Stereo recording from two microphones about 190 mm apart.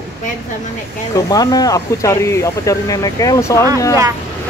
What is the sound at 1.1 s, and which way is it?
Speech, 20° left (ahead or behind).